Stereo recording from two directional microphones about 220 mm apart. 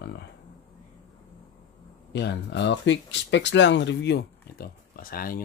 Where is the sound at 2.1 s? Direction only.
50° left (ahead or behind).